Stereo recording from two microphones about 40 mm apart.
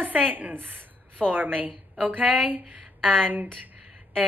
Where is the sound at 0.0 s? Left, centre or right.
Right.